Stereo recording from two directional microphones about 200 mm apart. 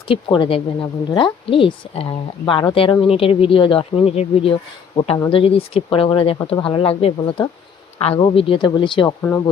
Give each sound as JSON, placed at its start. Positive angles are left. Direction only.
{"t": 0.1, "sound": "speech", "side_deg": 25}